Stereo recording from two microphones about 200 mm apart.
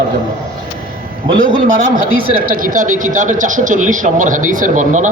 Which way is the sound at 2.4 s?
45° right (ahead or behind).